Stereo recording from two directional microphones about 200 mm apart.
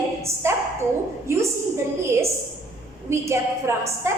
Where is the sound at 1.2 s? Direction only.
15° right (ahead or behind).